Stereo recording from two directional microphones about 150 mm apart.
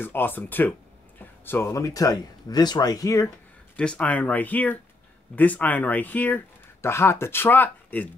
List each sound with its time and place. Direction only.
0.0 s speech: 15° left (ahead or behind)
3.7 s speech: 10° left (ahead or behind)